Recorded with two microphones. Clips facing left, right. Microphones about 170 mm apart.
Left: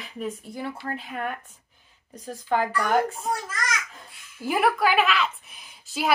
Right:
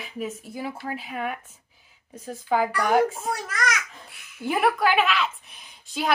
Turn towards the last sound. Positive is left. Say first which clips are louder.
# even
turn(degrees=0)  # may be behind; listen again after turning